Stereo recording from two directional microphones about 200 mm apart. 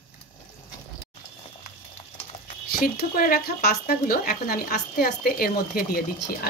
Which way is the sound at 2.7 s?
50° left (ahead or behind).